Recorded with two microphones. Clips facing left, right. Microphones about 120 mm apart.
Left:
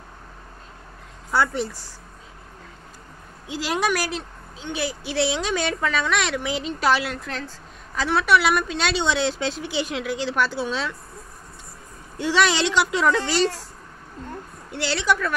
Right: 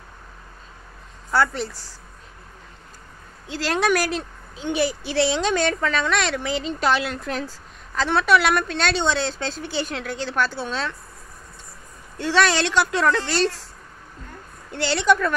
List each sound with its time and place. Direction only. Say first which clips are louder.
1.3 s a woman's voice: right 1 dB; 15° left (ahead or behind)
3.4 s a woman's voice: right 2 dB; 10° left (ahead or behind)
9.2 s speech: left 3 dB; 40° right (ahead or behind)
9.8 s a woman's voice: left 1 dB; 10° left (ahead or behind)
12.2 s a woman's voice: right 1 dB; 15° left (ahead or behind)
14.7 s speech: right 3 dB; 5° left (ahead or behind)